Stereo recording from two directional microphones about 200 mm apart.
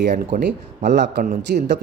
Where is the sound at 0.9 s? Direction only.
60° right (ahead or behind).